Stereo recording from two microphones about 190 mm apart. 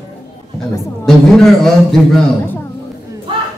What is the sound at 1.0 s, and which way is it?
Speech, centre (ahead or behind).